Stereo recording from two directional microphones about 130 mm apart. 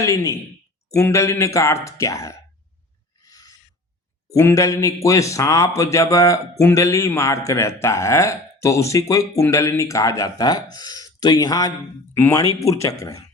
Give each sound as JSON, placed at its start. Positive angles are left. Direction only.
{"t": 0.0, "sound": "a man's voice", "side_deg": 25}
{"t": 3.2, "sound": "a sound", "side_deg": 30}
{"t": 4.3, "sound": "a man's voice", "side_deg": 25}